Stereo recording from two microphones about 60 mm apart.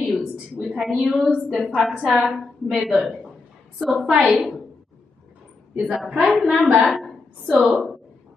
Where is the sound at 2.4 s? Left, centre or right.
Centre.